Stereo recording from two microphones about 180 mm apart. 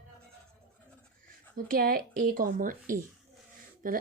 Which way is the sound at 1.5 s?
50° right (ahead or behind).